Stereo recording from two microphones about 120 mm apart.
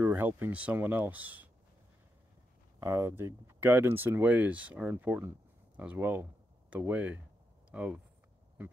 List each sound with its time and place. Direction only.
0.0 s speech: 15° right (ahead or behind)
2.8 s speech: 25° right (ahead or behind)